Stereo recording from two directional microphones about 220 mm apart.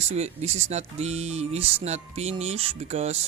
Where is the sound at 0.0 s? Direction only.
30° right (ahead or behind).